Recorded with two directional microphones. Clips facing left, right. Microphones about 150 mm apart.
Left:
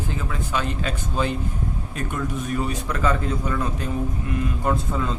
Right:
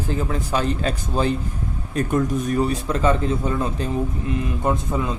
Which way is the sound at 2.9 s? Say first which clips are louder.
Right 4 dB; 25° right (ahead or behind).